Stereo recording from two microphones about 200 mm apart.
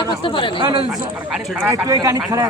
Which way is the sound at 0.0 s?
25° left (ahead or behind).